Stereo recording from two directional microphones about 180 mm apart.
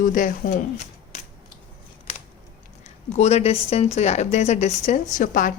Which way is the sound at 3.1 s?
40° left (ahead or behind).